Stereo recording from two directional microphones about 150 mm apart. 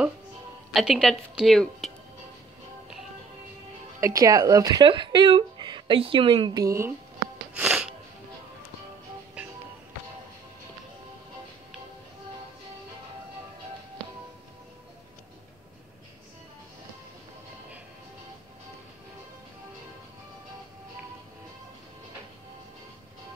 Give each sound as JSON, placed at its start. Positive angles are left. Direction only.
{"t": 0.7, "sound": "a woman's voice", "side_deg": 0}
{"t": 4.0, "sound": "speech", "side_deg": -25}
{"t": 7.5, "sound": "wheeze", "side_deg": -5}
{"t": 9.4, "sound": "music", "side_deg": -10}